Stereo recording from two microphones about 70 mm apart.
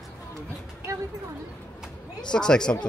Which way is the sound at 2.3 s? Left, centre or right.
Centre.